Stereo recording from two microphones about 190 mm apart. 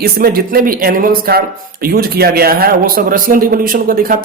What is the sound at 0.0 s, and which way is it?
Speech, 50° right (ahead or behind).